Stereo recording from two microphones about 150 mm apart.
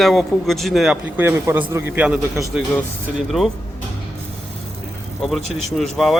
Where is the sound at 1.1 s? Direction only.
15° right (ahead or behind).